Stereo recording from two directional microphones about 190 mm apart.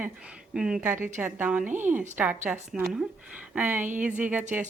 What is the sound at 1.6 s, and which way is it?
Speech, 40° right (ahead or behind).